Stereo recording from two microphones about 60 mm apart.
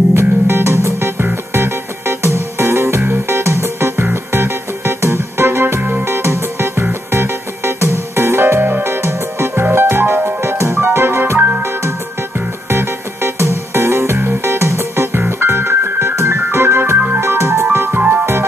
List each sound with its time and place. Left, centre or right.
0.1 s music: right
5.8 s music: right
6.0 s music: right
11.3 s music: right
12.4 s music: right
17.7 s music: right